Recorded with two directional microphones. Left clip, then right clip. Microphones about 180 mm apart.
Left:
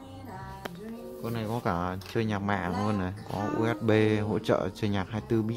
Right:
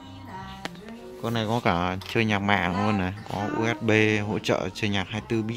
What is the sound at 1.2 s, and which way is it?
Speech, 20° right (ahead or behind).